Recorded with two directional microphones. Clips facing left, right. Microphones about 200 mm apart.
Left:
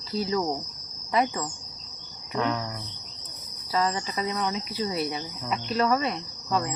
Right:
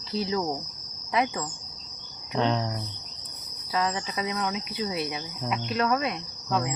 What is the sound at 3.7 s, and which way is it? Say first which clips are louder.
Speech: left 1 dB; centre (ahead or behind).